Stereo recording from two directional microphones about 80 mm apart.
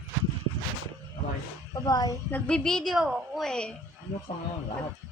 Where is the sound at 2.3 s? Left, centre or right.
Centre.